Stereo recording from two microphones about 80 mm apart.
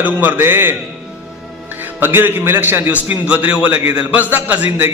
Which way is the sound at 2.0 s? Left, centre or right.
Right.